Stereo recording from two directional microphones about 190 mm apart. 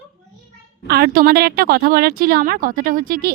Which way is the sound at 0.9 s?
55° right (ahead or behind).